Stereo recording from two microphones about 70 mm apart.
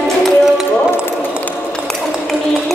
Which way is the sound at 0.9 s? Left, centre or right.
Left.